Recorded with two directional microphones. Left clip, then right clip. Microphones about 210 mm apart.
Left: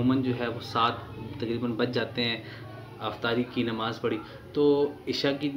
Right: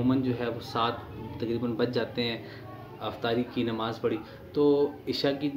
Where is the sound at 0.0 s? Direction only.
Centre (ahead or behind).